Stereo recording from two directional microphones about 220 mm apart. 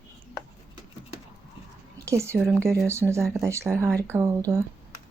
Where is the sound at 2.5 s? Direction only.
10° right (ahead or behind).